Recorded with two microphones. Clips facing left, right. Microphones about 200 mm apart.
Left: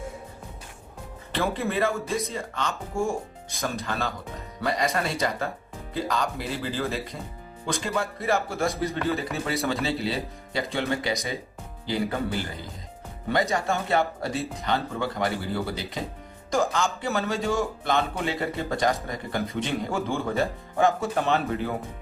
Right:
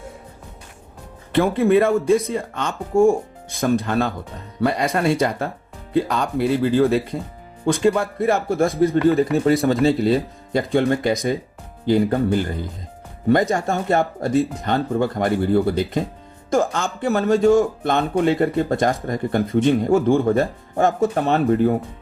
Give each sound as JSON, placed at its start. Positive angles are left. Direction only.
{"t": 1.3, "sound": "speech", "side_deg": -55}
{"t": 21.3, "sound": "speech", "side_deg": -40}